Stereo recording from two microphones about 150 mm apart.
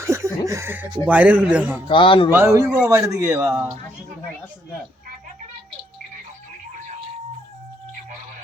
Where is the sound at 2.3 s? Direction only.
20° right (ahead or behind).